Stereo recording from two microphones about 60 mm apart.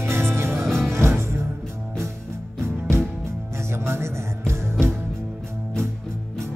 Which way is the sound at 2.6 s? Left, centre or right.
Right.